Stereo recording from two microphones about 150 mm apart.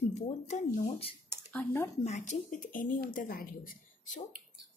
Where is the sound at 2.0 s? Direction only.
50° left (ahead or behind).